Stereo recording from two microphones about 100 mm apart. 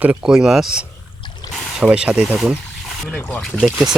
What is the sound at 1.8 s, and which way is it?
Speech, 15° right (ahead or behind).